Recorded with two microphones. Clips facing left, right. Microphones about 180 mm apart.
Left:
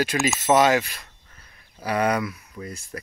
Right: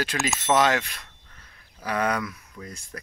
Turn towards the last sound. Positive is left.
turn(degrees=10)  # may be behind; listen again after turning